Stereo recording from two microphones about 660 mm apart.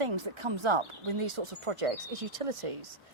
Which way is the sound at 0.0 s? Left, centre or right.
Right.